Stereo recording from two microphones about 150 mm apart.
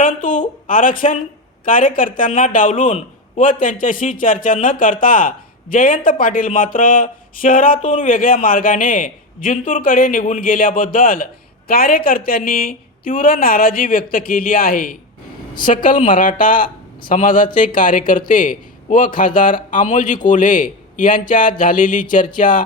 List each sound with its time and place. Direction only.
0.0 s a sound: 60° left (ahead or behind)
1.6 s speech: 65° left (ahead or behind)
11.7 s a woman's voice: 80° left